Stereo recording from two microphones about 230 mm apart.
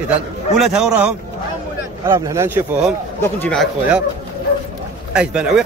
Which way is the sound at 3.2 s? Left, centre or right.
Centre.